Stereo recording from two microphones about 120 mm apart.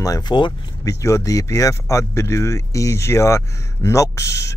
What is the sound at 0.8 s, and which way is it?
Speech, 25° left (ahead or behind).